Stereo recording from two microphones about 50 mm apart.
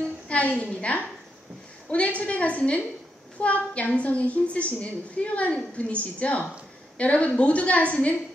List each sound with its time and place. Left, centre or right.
0.3 s a woman's voice: left